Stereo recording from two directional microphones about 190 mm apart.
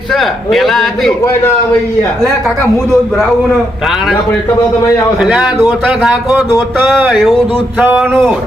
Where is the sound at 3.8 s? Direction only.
Centre (ahead or behind).